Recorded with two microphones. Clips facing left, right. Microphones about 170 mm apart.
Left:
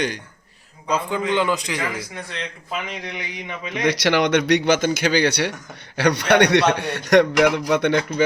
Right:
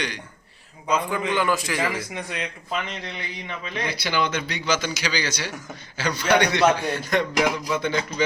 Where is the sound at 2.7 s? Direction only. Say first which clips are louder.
Left 2 dB; 10° left (ahead or behind).